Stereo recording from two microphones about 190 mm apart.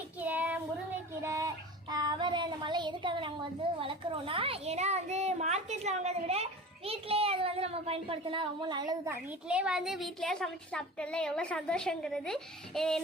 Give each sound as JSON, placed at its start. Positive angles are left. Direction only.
{"t": 0.2, "sound": "child singing", "side_deg": -10}
{"t": 3.8, "sound": "a child's voice", "side_deg": -30}
{"t": 9.5, "sound": "a woman's voice", "side_deg": -5}